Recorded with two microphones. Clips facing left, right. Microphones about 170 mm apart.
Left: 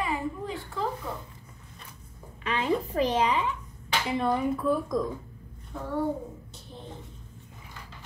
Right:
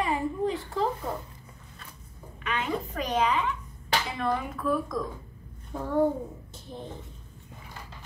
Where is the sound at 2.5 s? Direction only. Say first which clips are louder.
Left 3 dB; 30° left (ahead or behind).